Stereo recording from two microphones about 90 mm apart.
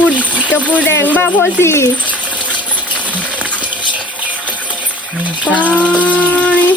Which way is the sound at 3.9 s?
15° left (ahead or behind).